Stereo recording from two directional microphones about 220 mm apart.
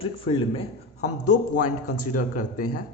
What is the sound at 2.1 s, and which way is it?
Speech, 35° left (ahead or behind).